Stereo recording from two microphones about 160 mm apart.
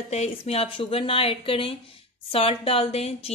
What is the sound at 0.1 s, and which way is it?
A woman's voice, 40° left (ahead or behind).